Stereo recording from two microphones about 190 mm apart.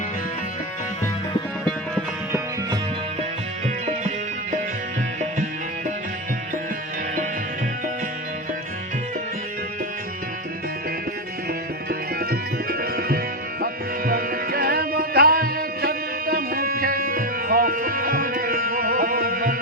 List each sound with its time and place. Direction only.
11.9 s music: 50° right (ahead or behind)